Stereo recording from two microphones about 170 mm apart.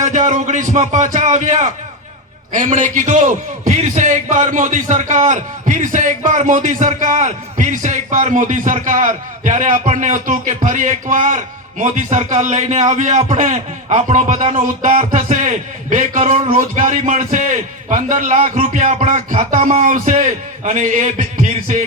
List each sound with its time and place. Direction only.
0.0 s a man's voice: 45° right (ahead or behind)